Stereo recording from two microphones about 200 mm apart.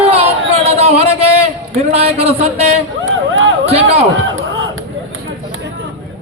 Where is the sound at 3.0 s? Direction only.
75° right (ahead or behind).